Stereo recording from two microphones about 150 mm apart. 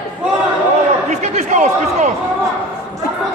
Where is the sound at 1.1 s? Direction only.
50° right (ahead or behind).